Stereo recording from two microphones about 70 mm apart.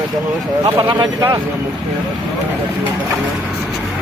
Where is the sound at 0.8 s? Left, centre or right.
Right.